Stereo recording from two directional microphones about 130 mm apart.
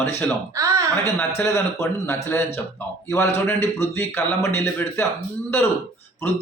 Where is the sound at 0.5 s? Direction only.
25° right (ahead or behind).